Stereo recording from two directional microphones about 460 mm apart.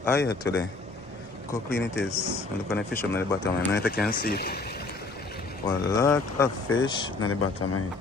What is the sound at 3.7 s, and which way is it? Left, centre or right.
Speech, left.